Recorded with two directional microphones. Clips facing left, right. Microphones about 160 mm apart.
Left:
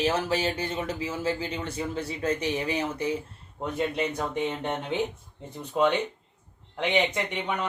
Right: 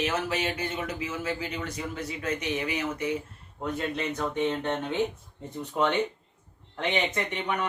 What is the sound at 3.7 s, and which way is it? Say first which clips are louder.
Speech: left 4 dB; 15° left (ahead or behind).